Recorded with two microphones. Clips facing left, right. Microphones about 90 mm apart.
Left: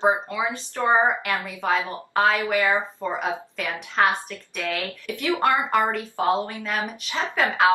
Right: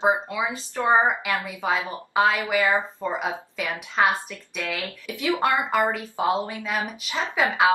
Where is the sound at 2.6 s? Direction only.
15° left (ahead or behind).